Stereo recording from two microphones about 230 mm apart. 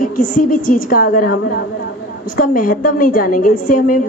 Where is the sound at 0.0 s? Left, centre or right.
Left.